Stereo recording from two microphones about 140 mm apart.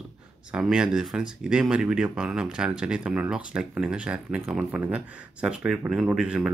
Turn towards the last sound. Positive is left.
turn(degrees=-5)  # may be behind; listen again after turning